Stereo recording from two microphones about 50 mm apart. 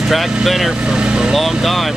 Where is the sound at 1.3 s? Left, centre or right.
Centre.